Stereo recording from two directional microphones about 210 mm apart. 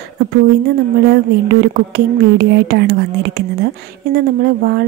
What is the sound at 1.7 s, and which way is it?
Speech, 45° right (ahead or behind).